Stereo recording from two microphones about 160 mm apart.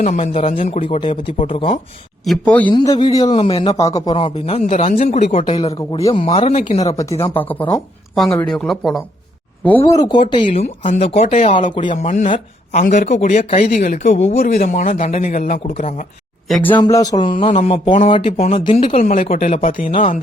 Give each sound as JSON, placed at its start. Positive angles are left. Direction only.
{"t": 0.0, "sound": "speech", "side_deg": 45}
{"t": 2.2, "sound": "speech", "side_deg": 5}
{"t": 2.7, "sound": "speech", "side_deg": 25}
{"t": 3.3, "sound": "speech", "side_deg": 35}
{"t": 3.9, "sound": "speech", "side_deg": 25}
{"t": 4.2, "sound": "speech", "side_deg": 40}
{"t": 6.8, "sound": "speech", "side_deg": 20}
{"t": 9.6, "sound": "speech", "side_deg": 15}
{"t": 10.5, "sound": "speech", "side_deg": 45}
{"t": 11.5, "sound": "speech", "side_deg": 30}
{"t": 12.0, "sound": "speech", "side_deg": 50}
{"t": 16.7, "sound": "speech", "side_deg": 25}
{"t": 17.4, "sound": "speech", "side_deg": 40}